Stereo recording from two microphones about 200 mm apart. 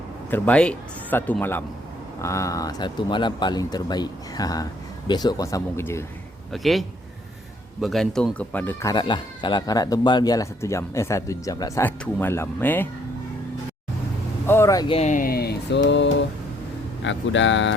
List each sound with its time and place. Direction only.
0.3 s speech: 10° left (ahead or behind)
6.5 s a man's voice: centre (ahead or behind)
14.4 s speech: 10° left (ahead or behind)
14.9 s mantra: 40° left (ahead or behind); by 16.1 s 60° left (ahead or behind)
17.0 s speech: 70° left (ahead or behind)